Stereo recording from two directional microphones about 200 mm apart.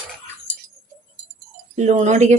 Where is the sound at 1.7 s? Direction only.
35° right (ahead or behind).